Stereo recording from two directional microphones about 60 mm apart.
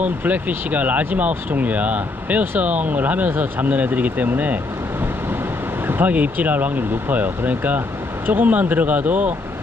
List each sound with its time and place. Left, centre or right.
0.0 s speech: right
5.9 s speech: right